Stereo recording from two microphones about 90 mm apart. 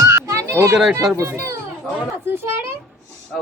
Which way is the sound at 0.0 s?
35° right (ahead or behind).